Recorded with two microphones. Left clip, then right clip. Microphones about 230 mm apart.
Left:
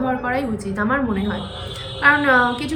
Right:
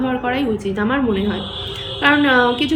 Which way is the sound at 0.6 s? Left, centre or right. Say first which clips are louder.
Right 2 dB; centre.